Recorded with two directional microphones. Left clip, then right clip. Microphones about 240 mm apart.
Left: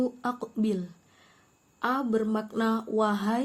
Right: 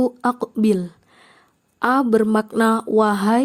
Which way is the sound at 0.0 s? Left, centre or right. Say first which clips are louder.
Right 10 dB; right.